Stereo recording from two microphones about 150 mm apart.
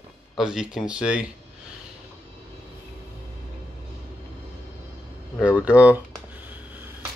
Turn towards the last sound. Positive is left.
turn(degrees=-10)  # may be behind; listen again after turning